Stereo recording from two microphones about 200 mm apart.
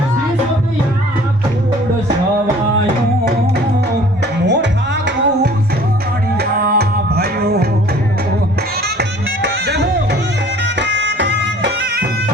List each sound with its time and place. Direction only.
4.4 s music: 60° right (ahead or behind)
9.0 s music: 60° right (ahead or behind)